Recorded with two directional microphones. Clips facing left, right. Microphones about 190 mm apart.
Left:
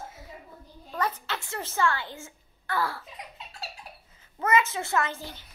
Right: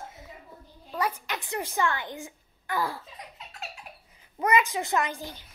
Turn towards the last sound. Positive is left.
turn(degrees=-15)  # may be behind; listen again after turning